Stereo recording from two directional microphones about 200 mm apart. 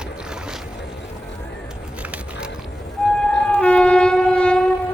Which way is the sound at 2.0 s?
5° right (ahead or behind).